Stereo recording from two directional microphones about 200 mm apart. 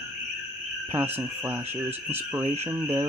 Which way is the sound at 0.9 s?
10° right (ahead or behind).